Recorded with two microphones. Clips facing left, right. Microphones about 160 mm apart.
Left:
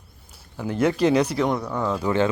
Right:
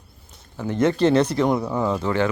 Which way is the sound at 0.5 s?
10° left (ahead or behind).